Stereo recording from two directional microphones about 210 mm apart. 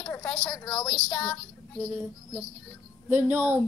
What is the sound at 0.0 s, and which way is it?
A woman's voice, 5° left (ahead or behind).